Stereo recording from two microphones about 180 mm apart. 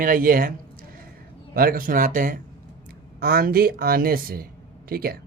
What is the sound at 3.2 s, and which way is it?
Speech, 60° right (ahead or behind).